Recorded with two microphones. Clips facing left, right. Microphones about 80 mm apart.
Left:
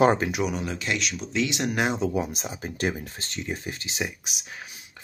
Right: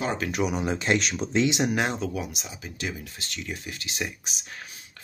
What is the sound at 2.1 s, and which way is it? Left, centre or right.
Speech, left.